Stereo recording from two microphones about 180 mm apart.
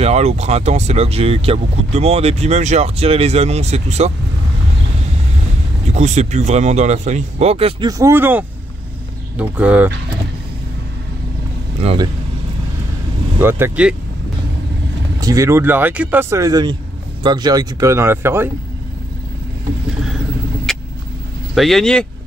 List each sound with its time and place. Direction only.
0.0 s speech: 35° right (ahead or behind)
5.9 s speech: 40° right (ahead or behind)
8.0 s speech: 10° right (ahead or behind)
11.8 s speech: 30° right (ahead or behind)
13.4 s speech: 10° right (ahead or behind)
15.1 s speech: 20° right (ahead or behind)
20.7 s vehicle: centre (ahead or behind)
21.5 s speech: centre (ahead or behind)